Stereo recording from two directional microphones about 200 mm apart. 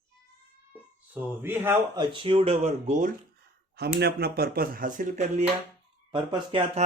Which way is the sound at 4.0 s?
50° right (ahead or behind).